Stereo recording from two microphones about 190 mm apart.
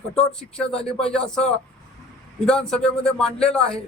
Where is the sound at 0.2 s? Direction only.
5° left (ahead or behind).